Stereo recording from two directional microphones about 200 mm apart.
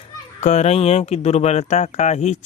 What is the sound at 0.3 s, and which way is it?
Speech, 35° left (ahead or behind).